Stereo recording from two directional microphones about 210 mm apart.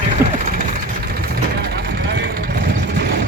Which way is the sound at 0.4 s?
40° right (ahead or behind).